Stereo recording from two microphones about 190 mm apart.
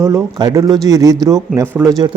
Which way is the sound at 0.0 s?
15° right (ahead or behind).